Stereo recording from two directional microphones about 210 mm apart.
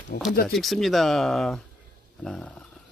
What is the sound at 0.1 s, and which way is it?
Speech, 45° left (ahead or behind).